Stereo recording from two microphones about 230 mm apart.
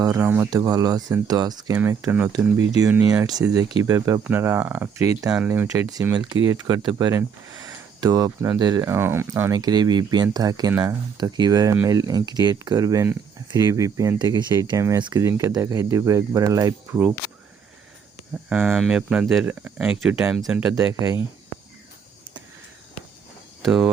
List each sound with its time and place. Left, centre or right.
0.0 s speech: centre
18.4 s speech: centre
23.6 s speech: centre